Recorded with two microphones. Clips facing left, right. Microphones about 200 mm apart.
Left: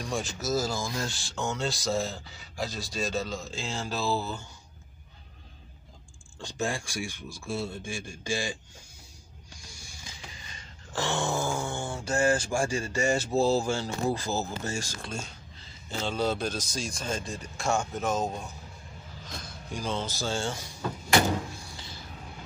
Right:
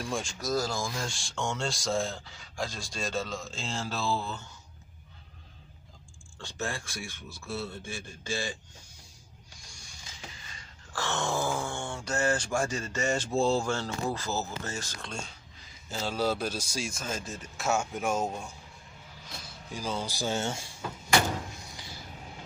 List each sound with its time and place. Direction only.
0.0 s speech: centre (ahead or behind)
6.4 s speech: 15° left (ahead or behind)
9.6 s music: 5° left (ahead or behind)
10.9 s a sound: 20° left (ahead or behind)
11.1 s a man's voice: centre (ahead or behind); by 20.7 s 25° right (ahead or behind)
21.5 s a sound: 20° right (ahead or behind)